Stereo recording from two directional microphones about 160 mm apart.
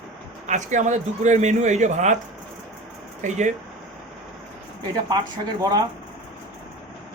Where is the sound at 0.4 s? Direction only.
50° right (ahead or behind).